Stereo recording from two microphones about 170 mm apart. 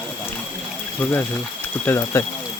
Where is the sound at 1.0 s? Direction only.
10° left (ahead or behind).